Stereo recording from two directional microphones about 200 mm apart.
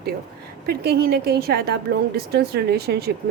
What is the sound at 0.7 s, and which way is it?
Speech, 50° right (ahead or behind).